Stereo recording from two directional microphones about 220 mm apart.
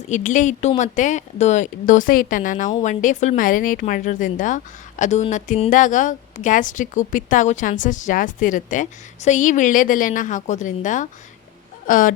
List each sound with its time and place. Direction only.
0.1 s speech: 35° left (ahead or behind)